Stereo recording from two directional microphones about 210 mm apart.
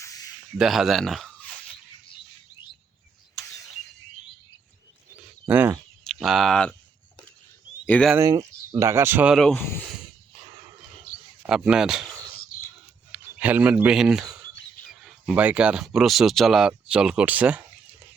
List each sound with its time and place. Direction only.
0.0 s a sound: 15° left (ahead or behind)
0.6 s speech: centre (ahead or behind)
2.6 s bird: 20° left (ahead or behind)
5.5 s speech: 10° right (ahead or behind)
6.1 s speech: centre (ahead or behind)
7.9 s speech: 5° left (ahead or behind)
8.1 s speech: 15° right (ahead or behind); by 9.6 s centre (ahead or behind)
11.4 s speech: 5° right (ahead or behind)
13.1 s speech: 5° right (ahead or behind)